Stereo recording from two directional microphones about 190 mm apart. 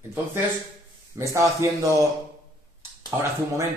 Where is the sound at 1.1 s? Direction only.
15° right (ahead or behind).